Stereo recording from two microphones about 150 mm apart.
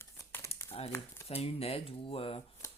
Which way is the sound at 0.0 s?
15° left (ahead or behind).